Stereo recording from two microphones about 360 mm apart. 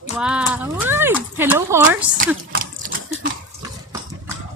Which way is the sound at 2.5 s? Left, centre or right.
Right.